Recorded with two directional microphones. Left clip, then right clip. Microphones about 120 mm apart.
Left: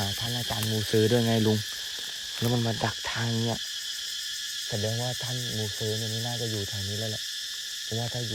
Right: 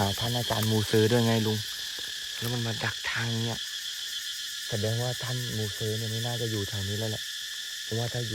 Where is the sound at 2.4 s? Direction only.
25° left (ahead or behind).